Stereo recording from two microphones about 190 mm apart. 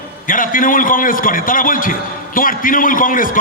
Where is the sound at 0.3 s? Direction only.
45° left (ahead or behind).